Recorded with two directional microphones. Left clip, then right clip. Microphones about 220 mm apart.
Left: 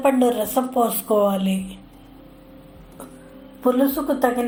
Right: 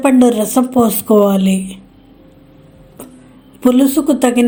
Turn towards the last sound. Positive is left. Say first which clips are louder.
# right 7 dB
turn(degrees=-50)  # may be behind; listen again after turning